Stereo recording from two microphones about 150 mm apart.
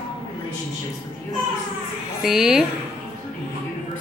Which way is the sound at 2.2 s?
5° right (ahead or behind).